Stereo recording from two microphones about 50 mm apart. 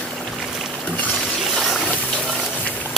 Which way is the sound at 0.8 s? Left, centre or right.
Left.